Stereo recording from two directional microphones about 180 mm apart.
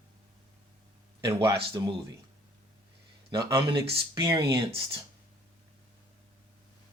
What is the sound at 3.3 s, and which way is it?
Speech, 20° right (ahead or behind).